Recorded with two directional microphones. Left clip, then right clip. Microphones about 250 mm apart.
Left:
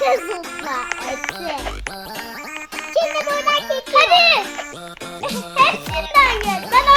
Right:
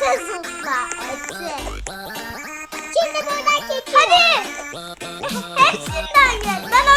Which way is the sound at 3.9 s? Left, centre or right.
Left.